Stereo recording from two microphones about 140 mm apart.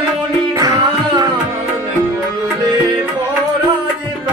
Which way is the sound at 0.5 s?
25° right (ahead or behind).